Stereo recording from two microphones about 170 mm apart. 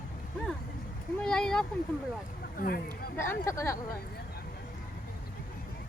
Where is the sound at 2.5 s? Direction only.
60° left (ahead or behind).